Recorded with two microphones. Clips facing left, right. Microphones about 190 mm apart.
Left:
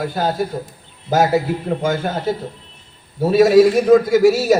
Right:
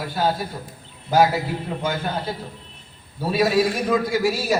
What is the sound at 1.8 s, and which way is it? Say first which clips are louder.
Speech: left 6 dB; 45° left (ahead or behind).